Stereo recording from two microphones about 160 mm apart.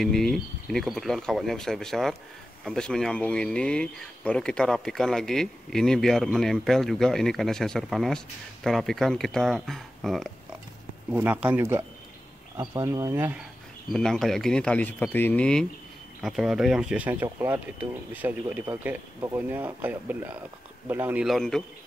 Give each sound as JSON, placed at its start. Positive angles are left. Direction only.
{"t": 0.0, "sound": "speech", "side_deg": 0}
{"t": 11.1, "sound": "speech", "side_deg": -10}
{"t": 13.9, "sound": "speech", "side_deg": 5}
{"t": 21.3, "sound": "speech", "side_deg": 5}